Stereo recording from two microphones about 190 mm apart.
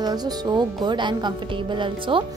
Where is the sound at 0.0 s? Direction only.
20° right (ahead or behind).